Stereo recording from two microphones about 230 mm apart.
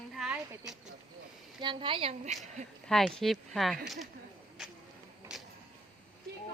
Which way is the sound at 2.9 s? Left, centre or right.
Centre.